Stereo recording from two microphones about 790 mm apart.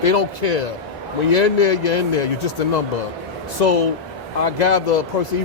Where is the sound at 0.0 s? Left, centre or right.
Left.